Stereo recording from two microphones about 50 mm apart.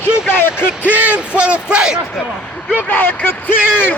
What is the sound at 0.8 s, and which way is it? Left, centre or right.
Speech, right.